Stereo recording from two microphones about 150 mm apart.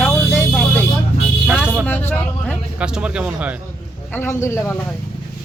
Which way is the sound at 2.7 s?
5° right (ahead or behind).